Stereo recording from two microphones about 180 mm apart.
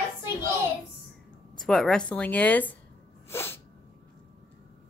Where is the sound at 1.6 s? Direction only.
Centre (ahead or behind).